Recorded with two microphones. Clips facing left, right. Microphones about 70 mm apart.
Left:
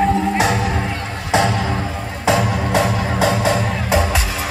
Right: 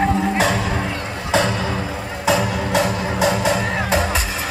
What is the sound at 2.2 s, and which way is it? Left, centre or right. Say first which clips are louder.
Music: left 2 dB; left.